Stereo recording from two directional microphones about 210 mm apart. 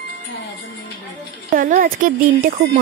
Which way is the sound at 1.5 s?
40° right (ahead or behind).